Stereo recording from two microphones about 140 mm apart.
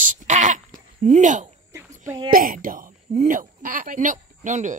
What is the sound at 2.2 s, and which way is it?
A woman's voice, 85° right.